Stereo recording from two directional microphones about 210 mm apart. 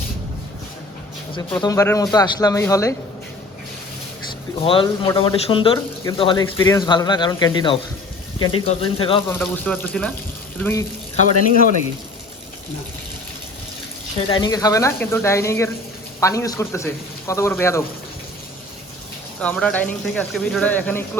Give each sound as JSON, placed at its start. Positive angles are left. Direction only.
{"t": 1.4, "sound": "speech", "side_deg": 15}
{"t": 4.6, "sound": "speech", "side_deg": 25}
{"t": 8.4, "sound": "speech", "side_deg": 90}
{"t": 8.6, "sound": "speech", "side_deg": 25}
{"t": 9.3, "sound": "speech", "side_deg": 5}
{"t": 14.2, "sound": "speech", "side_deg": 25}
{"t": 19.4, "sound": "speech", "side_deg": 5}